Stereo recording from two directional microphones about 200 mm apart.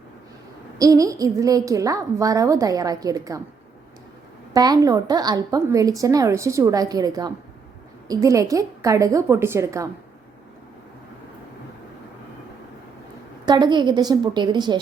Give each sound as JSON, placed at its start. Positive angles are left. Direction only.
{"t": 0.8, "sound": "a woman's voice", "side_deg": -15}
{"t": 4.5, "sound": "a woman's voice", "side_deg": -20}
{"t": 13.4, "sound": "a woman's voice", "side_deg": -20}